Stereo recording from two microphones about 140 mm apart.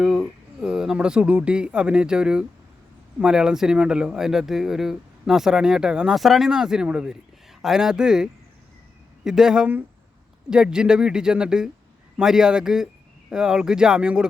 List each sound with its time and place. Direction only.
0.0 s speech: 5° right (ahead or behind)